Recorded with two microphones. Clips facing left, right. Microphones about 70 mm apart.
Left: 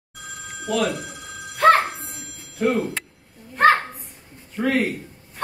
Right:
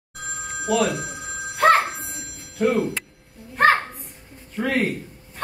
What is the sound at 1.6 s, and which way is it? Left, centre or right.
Music, right.